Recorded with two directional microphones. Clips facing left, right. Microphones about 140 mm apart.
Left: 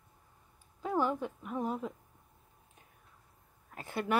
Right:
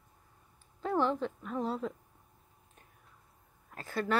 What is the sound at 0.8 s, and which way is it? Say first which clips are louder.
A woman's voice: right 1 dB; 10° left (ahead or behind).